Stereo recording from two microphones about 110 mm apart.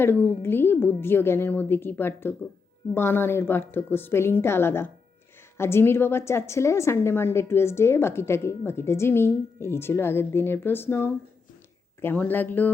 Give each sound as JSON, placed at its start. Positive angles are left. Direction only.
{"t": 0.0, "sound": "a woman's voice", "side_deg": 20}